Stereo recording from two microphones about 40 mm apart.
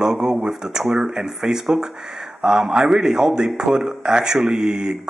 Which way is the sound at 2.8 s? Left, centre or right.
Centre.